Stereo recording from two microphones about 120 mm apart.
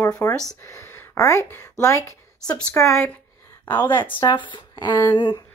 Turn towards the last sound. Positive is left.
turn(degrees=35)  # may be behind; listen again after turning